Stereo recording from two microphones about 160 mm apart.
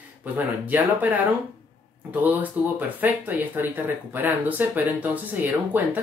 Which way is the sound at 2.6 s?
10° right (ahead or behind).